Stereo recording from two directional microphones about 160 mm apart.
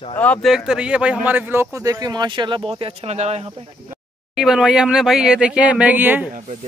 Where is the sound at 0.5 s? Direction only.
5° right (ahead or behind); by 3.5 s 45° right (ahead or behind).